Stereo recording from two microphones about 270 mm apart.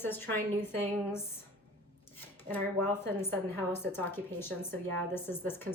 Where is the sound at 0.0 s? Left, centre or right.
Centre.